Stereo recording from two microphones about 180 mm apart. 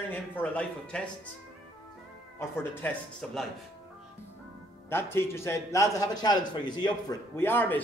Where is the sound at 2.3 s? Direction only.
10° left (ahead or behind).